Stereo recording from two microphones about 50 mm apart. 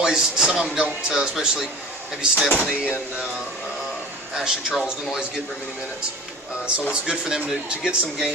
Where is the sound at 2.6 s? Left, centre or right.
Right.